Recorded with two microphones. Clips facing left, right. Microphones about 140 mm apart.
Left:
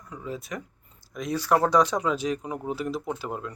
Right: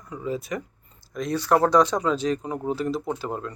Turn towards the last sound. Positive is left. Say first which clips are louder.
# right 3 dB
turn(degrees=5)  # may be behind; listen again after turning